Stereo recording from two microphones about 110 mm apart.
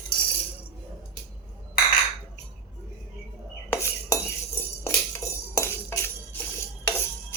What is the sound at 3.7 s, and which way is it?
Cutlery, 25° left (ahead or behind).